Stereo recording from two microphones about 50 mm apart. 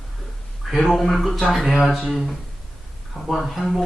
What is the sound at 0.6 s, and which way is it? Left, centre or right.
Speech, centre.